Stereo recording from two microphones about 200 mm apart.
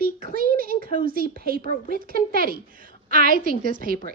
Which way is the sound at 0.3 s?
45° right (ahead or behind).